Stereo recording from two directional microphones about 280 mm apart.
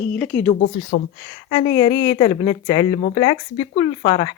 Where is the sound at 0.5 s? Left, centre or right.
Left.